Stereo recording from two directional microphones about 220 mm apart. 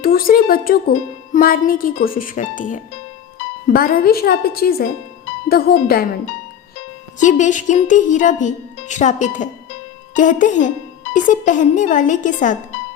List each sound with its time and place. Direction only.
0.0 s speech: 40° left (ahead or behind)
7.2 s speech: 35° left (ahead or behind)